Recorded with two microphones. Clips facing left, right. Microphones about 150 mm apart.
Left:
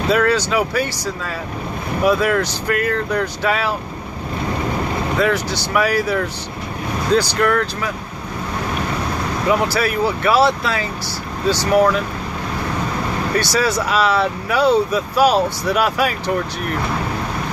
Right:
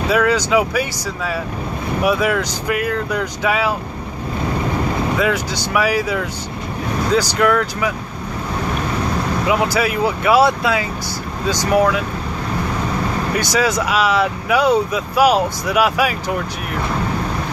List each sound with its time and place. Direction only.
0.1 s speech: 10° right (ahead or behind)
5.2 s speech: 10° right (ahead or behind)
7.2 s speech: 10° right (ahead or behind)
9.5 s speech: 15° right (ahead or behind)
13.4 s speech: 15° right (ahead or behind)